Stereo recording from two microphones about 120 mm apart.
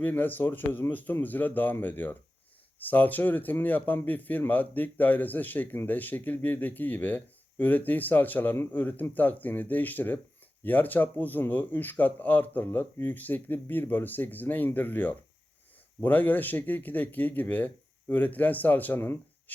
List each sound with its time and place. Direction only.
0.0 s a man's voice: 15° left (ahead or behind)